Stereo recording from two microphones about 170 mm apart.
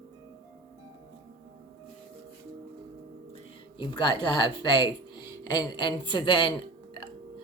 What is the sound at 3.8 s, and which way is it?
Speech, 25° left (ahead or behind).